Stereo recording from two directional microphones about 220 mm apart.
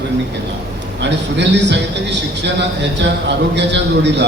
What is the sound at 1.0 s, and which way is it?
A man's voice, 50° right (ahead or behind).